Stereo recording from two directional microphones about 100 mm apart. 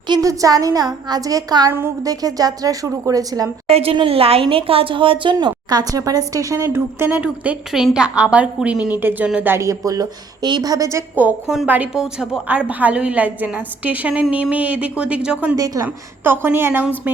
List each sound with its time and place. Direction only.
0.1 s a woman's voice: 35° right (ahead or behind)
3.7 s a woman's voice: 80° right
3.9 s a woman's voice: 70° right (ahead or behind); by 9.5 s 10° right (ahead or behind)
9.5 s a woman's voice: 30° right (ahead or behind)
11.1 s a woman's voice: 15° right (ahead or behind)
15.5 s a woman's voice: 35° right (ahead or behind)
16.2 s a woman's voice: 20° right (ahead or behind)